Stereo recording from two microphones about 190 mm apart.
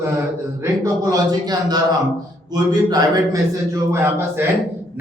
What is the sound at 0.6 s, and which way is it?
A man's voice, 15° right (ahead or behind).